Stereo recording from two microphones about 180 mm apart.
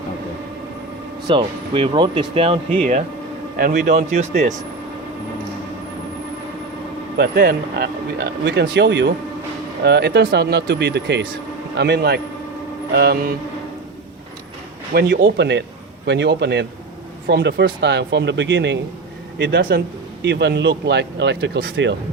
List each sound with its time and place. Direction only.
1.3 s speech: 30° right (ahead or behind)
3.6 s a man's voice: 55° right (ahead or behind)
4.2 s speech: 40° right (ahead or behind)
7.2 s a man's voice: 60° right (ahead or behind)
14.9 s speech: 65° right (ahead or behind)